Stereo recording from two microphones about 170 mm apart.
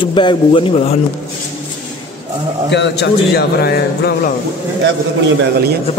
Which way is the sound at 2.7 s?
80° left.